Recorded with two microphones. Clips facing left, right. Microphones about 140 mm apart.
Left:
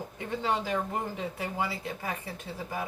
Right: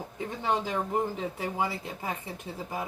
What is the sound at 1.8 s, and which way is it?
Speech, 20° right (ahead or behind).